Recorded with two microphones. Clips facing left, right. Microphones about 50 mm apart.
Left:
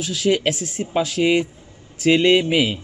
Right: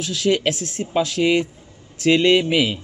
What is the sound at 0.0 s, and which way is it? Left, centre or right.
Speech, centre.